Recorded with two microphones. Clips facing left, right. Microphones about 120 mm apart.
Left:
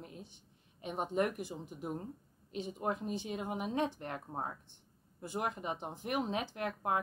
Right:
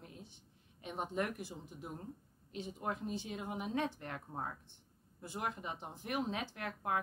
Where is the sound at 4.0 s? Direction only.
25° left (ahead or behind).